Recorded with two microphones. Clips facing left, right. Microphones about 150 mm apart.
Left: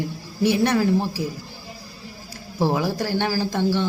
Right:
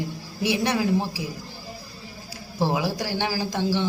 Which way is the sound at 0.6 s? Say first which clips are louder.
Left 3 dB; 10° right (ahead or behind).